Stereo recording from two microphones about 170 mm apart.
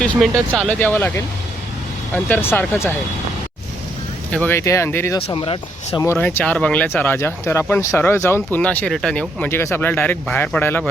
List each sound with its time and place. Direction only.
0.0 s speech: 5° left (ahead or behind)
4.3 s speech: 10° left (ahead or behind)
5.2 s speech: 30° left (ahead or behind)
6.0 s speech: 15° left (ahead or behind)